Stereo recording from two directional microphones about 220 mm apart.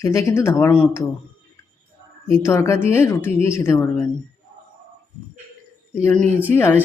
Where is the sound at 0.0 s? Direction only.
15° left (ahead or behind).